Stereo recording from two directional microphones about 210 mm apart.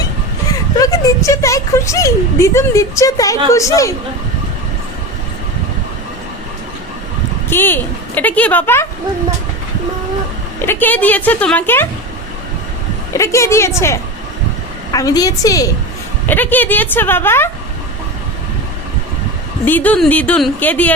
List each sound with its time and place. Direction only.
0.4 s speech: 15° left (ahead or behind)
7.5 s speech: 10° left (ahead or behind)
10.7 s speech: 10° left (ahead or behind)
13.1 s speech: 15° left (ahead or behind)
19.6 s speech: 10° left (ahead or behind)